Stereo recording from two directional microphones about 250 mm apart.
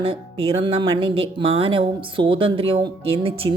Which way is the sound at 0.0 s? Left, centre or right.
Right.